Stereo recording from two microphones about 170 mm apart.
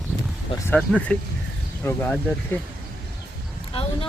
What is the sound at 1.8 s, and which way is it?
Speech, 10° left (ahead or behind).